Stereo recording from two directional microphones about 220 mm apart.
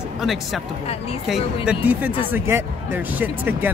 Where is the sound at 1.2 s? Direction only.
5° right (ahead or behind).